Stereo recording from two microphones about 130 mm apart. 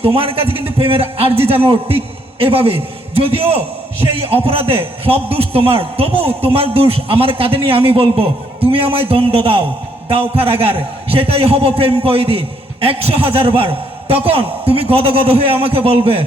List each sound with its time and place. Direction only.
0.0 s a man's voice: 45° right (ahead or behind)